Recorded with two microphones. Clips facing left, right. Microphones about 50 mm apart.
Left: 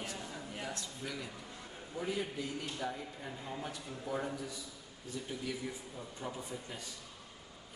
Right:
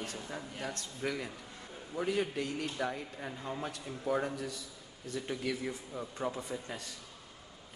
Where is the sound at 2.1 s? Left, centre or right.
Right.